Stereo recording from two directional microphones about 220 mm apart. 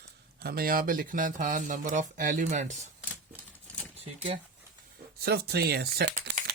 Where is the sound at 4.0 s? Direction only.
30° right (ahead or behind).